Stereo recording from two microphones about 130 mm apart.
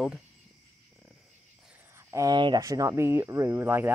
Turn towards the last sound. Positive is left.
turn(degrees=-15)  # may be behind; listen again after turning